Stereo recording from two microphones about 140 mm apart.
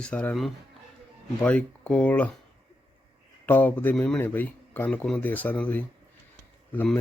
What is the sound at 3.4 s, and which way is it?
Speech, 10° left (ahead or behind).